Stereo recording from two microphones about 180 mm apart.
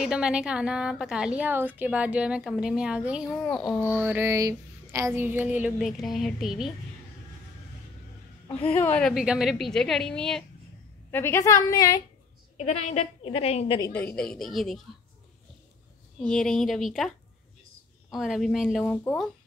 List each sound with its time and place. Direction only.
0.0 s a woman's voice: 5° right (ahead or behind)
8.6 s a woman's voice: 10° left (ahead or behind)
9.1 s a woman's voice: 5° right (ahead or behind); by 12.0 s 20° left (ahead or behind)
12.5 s a woman's voice: 40° left (ahead or behind)
13.9 s a woman's voice: 5° left (ahead or behind)
16.2 s a woman's voice: 5° left (ahead or behind)
18.1 s a woman's voice: centre (ahead or behind)